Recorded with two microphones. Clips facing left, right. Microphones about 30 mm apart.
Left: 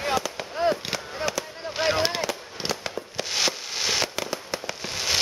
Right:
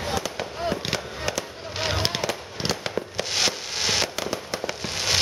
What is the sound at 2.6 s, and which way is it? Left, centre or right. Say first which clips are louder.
Fireworks: right 3 dB; centre.